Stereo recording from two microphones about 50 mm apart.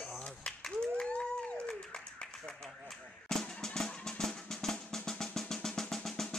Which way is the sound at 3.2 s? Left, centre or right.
Centre.